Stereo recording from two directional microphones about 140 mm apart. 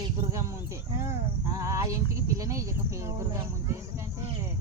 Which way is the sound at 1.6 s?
20° right (ahead or behind).